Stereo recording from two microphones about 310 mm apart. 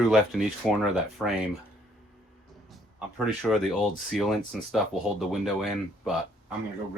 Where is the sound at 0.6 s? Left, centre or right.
Centre.